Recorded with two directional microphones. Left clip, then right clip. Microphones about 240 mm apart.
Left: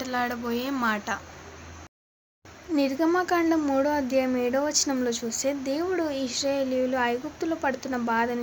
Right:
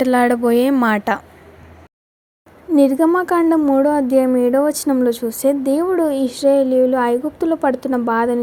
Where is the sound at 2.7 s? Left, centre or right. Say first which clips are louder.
Right 10 dB; right.